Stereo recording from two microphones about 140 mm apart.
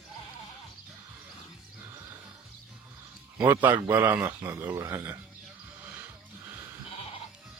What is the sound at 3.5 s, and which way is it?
Speech, 15° right (ahead or behind).